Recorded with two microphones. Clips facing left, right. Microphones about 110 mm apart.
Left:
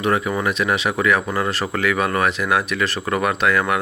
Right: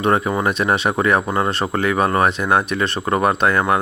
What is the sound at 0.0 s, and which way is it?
Speech, 30° right (ahead or behind).